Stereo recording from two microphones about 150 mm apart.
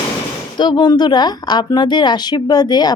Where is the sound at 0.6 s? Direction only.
30° left (ahead or behind).